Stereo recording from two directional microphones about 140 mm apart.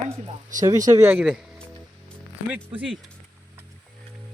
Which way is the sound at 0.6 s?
25° right (ahead or behind).